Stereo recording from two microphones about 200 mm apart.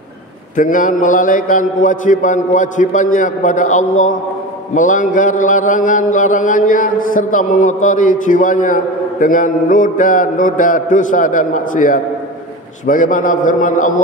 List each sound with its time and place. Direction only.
0.6 s mantra: 40° left (ahead or behind)